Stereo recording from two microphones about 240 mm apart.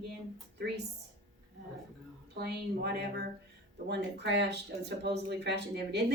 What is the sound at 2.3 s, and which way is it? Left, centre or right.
Speech, right.